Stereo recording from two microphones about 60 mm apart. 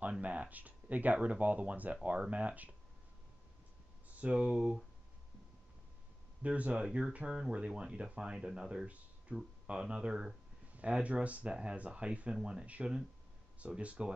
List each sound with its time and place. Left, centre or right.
0.2 s speech: right
4.1 s speech: right
4.6 s speech: centre
6.4 s speech: right